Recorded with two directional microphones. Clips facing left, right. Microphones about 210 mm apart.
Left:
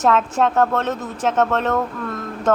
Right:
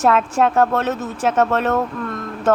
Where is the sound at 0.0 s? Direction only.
10° right (ahead or behind).